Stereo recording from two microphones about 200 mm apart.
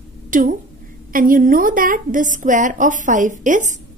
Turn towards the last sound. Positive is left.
turn(degrees=-40)  # may be behind; listen again after turning